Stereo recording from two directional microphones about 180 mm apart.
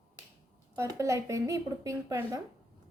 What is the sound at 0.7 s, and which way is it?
A woman's voice, 15° right (ahead or behind).